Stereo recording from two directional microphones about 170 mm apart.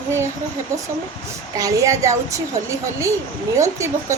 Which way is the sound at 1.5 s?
20° right (ahead or behind).